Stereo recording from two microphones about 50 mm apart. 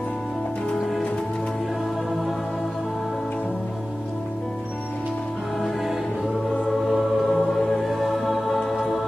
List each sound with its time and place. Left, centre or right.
5.6 s music: centre